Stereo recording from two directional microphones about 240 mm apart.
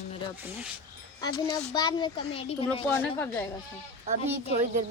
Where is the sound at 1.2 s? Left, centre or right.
Centre.